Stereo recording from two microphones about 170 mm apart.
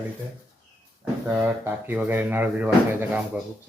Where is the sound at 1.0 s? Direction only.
10° right (ahead or behind).